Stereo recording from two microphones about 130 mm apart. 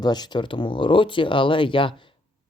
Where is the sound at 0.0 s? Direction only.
35° left (ahead or behind).